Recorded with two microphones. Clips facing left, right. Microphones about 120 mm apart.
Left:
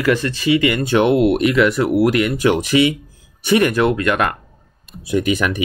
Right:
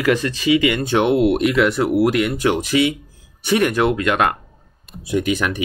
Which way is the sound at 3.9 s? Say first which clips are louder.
Even; 55° left (ahead or behind).